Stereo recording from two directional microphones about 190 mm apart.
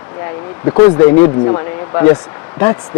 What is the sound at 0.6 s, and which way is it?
Speech, 20° left (ahead or behind).